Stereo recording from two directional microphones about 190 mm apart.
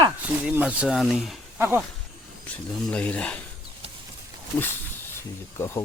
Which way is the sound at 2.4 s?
5° left (ahead or behind).